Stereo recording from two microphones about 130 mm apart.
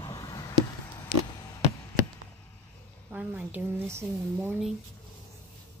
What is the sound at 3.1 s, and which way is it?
Speech, 15° right (ahead or behind).